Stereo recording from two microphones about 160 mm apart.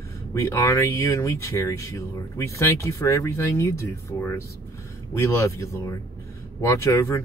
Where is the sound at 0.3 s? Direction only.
20° left (ahead or behind).